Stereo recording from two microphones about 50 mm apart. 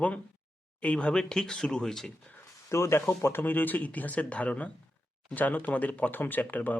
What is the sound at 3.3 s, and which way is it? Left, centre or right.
Speech, left.